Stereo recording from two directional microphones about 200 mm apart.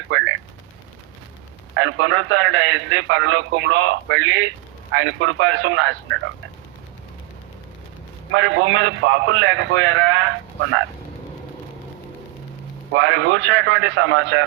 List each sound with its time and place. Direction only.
0.1 s a sound: 70° right (ahead or behind)
1.7 s a man's voice: 70° right (ahead or behind)
8.3 s a man's voice: 70° right (ahead or behind)
12.9 s a man's voice: 70° right (ahead or behind)